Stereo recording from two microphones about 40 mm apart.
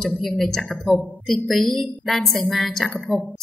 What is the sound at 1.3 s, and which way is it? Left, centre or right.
A woman's voice, centre.